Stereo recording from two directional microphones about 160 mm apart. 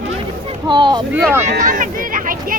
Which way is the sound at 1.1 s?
15° right (ahead or behind).